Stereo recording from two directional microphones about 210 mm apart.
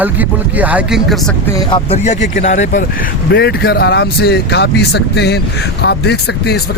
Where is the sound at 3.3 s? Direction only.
50° left (ahead or behind).